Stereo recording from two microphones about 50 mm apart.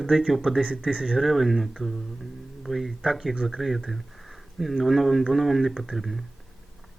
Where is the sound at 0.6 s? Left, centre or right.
Right.